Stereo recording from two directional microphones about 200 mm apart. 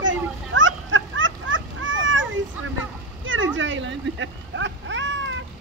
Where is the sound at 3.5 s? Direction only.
70° right (ahead or behind).